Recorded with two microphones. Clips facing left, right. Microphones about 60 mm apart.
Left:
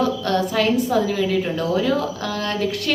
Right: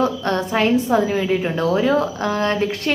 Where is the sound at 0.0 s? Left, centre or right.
Right.